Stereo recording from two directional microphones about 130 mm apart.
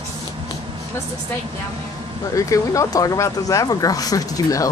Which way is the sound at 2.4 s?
25° left (ahead or behind).